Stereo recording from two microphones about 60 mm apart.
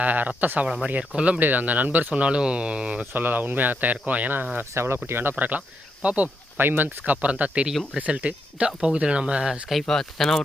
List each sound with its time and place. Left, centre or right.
0.0 s speech: right
3.1 s speech: right
4.7 s speech: right
5.4 s speech: right
6.6 s speech: right
7.0 s speech: right
9.8 s speech: centre